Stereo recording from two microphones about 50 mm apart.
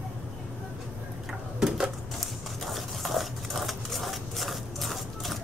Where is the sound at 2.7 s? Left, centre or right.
Centre.